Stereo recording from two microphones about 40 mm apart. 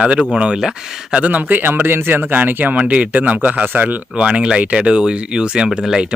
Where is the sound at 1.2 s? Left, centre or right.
Right.